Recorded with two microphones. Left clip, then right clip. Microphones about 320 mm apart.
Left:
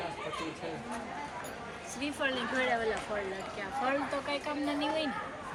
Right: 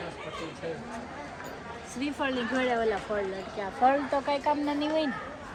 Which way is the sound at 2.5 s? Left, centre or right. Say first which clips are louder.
Right 4 dB; centre.